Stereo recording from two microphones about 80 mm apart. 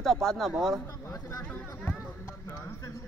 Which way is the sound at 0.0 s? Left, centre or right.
Centre.